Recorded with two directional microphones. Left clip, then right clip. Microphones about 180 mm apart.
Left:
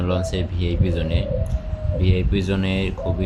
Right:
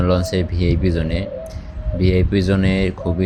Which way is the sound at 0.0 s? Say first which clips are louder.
Right 5 dB; 25° right (ahead or behind).